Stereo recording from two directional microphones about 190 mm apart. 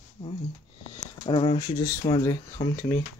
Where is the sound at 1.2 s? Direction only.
30° left (ahead or behind).